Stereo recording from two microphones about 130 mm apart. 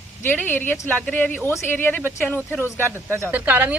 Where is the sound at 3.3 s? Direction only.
10° right (ahead or behind).